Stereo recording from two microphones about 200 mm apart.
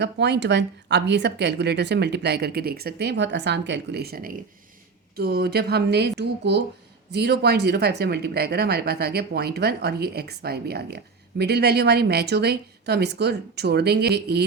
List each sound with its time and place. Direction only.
0.0 s speech: 60° right (ahead or behind)